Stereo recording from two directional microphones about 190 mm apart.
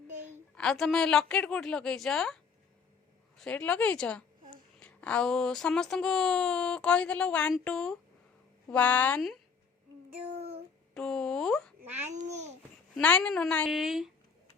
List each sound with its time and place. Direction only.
0.5 s a woman's voice: 5° left (ahead or behind)
10.9 s a sound: 5° left (ahead or behind)
12.3 s babbling: 35° right (ahead or behind)
13.0 s speech: 5° left (ahead or behind)